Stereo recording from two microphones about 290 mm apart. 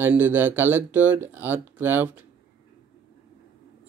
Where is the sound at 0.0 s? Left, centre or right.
Centre.